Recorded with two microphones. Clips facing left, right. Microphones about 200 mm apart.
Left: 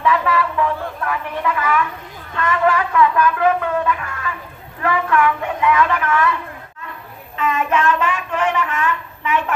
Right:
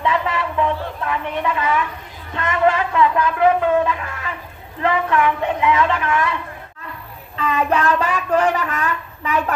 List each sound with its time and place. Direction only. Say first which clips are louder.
0.0 s a sound: left 3 dB; 25° right (ahead or behind)
4.8 s a woman's voice: even; 25° right (ahead or behind)
7.3 s speech: even; 35° right (ahead or behind)